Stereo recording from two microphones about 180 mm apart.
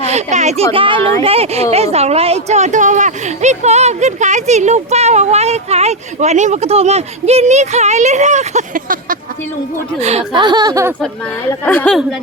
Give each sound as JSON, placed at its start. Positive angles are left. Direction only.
{"t": 0.1, "sound": "a woman's voice", "side_deg": -40}
{"t": 10.0, "sound": "a woman's voice", "side_deg": -35}
{"t": 10.4, "sound": "a sound", "side_deg": -20}
{"t": 11.4, "sound": "speech", "side_deg": 10}